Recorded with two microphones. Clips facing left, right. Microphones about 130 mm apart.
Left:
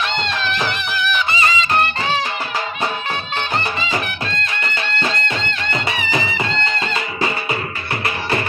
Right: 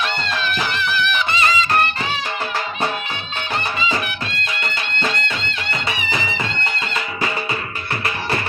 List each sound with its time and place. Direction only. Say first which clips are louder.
0.8 s music: even; 15° left (ahead or behind)